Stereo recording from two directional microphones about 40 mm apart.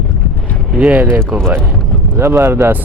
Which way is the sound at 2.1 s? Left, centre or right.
Right.